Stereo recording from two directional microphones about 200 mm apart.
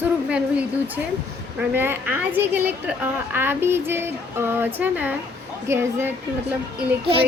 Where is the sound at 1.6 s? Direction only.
10° right (ahead or behind).